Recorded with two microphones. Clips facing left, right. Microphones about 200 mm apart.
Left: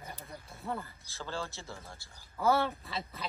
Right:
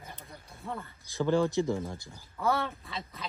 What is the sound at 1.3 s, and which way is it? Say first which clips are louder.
Speech: right 14 dB; 15° right (ahead or behind).